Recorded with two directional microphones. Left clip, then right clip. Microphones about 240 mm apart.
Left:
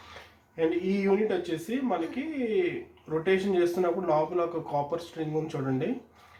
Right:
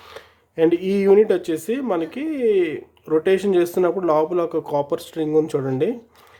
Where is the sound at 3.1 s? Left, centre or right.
Right.